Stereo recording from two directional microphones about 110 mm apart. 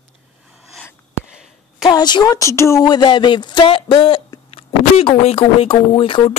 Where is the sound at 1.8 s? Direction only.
40° left (ahead or behind).